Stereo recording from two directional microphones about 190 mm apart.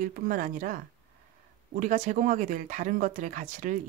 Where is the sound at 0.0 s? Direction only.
45° right (ahead or behind).